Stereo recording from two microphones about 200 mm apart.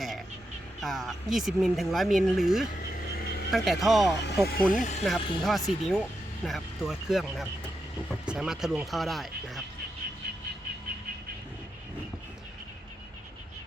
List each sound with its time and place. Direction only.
0.8 s speech: centre (ahead or behind)
4.4 s speech: 45° left (ahead or behind)
5.0 s speech: centre (ahead or behind)